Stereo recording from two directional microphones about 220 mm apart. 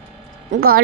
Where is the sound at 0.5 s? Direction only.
45° right (ahead or behind).